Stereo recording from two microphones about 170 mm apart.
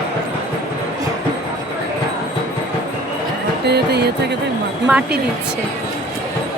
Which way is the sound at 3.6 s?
75° right (ahead or behind).